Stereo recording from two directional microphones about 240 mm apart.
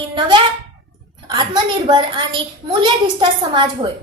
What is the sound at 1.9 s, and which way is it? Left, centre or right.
A woman's voice, centre.